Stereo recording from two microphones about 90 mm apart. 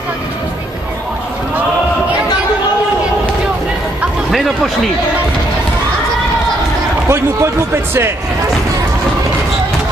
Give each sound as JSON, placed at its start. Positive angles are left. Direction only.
{"t": 7.1, "sound": "speech", "side_deg": -30}